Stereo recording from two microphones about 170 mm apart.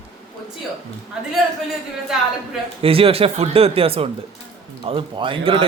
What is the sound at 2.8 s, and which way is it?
Speech, 35° right (ahead or behind).